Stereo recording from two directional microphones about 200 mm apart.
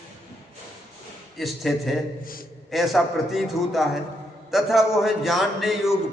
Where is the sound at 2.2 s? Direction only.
45° left (ahead or behind).